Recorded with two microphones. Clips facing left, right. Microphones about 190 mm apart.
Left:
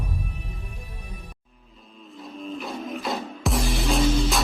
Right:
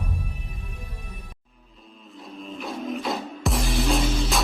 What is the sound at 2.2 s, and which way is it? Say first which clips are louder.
Music: left 1 dB; centre (ahead or behind).